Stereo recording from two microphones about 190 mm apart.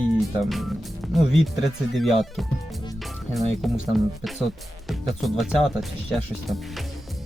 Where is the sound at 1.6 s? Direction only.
Centre (ahead or behind).